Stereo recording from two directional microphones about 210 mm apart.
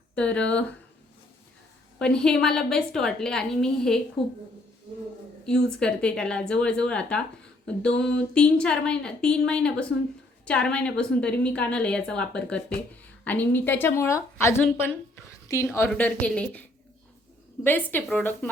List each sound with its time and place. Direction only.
0.2 s a woman's voice: 5° left (ahead or behind)
2.0 s a woman's voice: 5° left (ahead or behind)
5.6 s a woman's voice: 5° left (ahead or behind)